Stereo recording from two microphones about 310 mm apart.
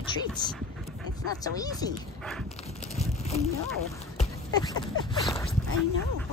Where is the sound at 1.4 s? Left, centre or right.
Centre.